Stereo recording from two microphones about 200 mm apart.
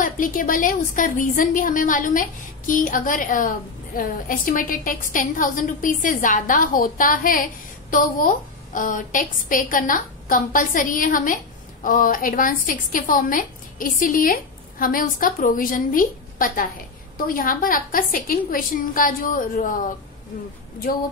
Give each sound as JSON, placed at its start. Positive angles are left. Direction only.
{"t": 0.0, "sound": "a woman's voice", "side_deg": 45}